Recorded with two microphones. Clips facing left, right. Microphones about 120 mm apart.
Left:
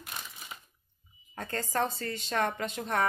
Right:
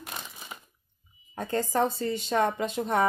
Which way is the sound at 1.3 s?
10° right (ahead or behind).